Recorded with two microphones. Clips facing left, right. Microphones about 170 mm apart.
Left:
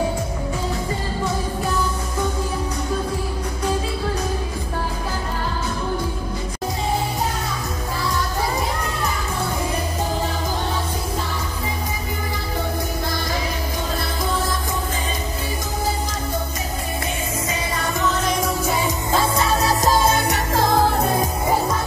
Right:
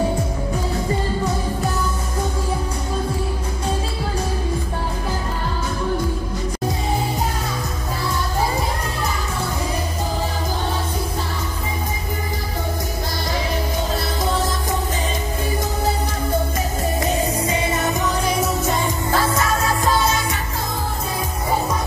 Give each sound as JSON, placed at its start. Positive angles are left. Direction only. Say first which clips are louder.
{"t": 17.5, "sound": "music", "louder": "right 4 dB", "side_deg": -20}
{"t": 18.2, "sound": "music", "louder": "right 1 dB", "side_deg": -5}
{"t": 19.3, "sound": "music", "louder": "left 1 dB", "side_deg": 35}